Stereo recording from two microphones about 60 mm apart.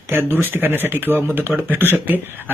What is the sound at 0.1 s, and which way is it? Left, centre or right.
Speech, right.